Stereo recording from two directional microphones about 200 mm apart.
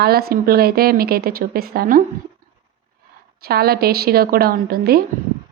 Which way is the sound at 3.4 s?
50° right (ahead or behind).